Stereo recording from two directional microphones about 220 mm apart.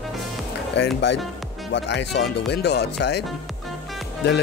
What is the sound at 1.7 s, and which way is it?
Speech, 55° left (ahead or behind).